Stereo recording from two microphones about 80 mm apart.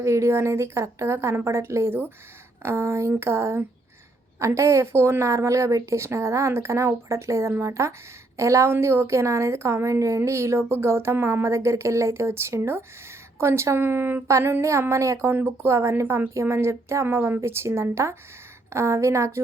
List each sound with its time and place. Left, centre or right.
0.0 s a woman's voice: right